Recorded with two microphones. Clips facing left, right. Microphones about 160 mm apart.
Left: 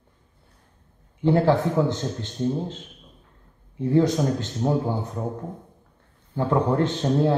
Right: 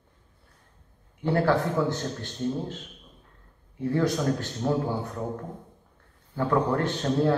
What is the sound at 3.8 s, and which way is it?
A man's voice, 20° left (ahead or behind).